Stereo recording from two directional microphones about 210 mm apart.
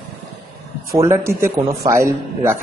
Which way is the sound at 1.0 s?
15° right (ahead or behind).